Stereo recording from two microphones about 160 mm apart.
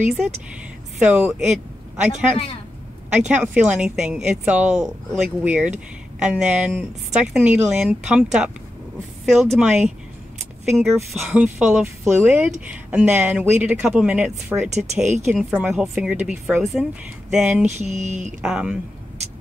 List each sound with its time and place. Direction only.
1.0 s a woman's voice: 5° right (ahead or behind)
17.7 s speech: 45° right (ahead or behind)
18.4 s a woman's voice: 5° right (ahead or behind)